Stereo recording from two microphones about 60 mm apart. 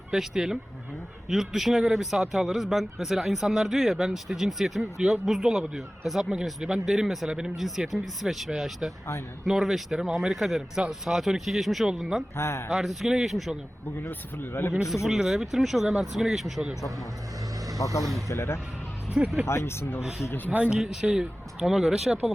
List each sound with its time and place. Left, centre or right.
0.1 s speech: centre
12.4 s speech: left
12.7 s speech: centre
14.1 s speech: left
14.7 s speech: centre
17.8 s speech: left
18.3 s speech: left
20.0 s speech: centre
20.5 s speech: right
20.7 s speech: centre